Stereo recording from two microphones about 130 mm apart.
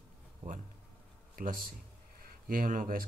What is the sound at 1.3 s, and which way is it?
Speech, 90° right.